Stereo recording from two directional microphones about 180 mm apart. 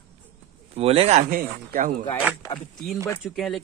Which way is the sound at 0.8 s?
35° right (ahead or behind).